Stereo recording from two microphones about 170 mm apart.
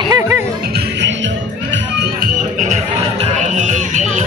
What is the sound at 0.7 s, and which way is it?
Music, 90° right.